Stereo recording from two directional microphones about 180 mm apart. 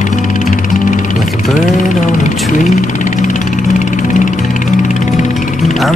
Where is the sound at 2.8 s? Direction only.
45° left (ahead or behind).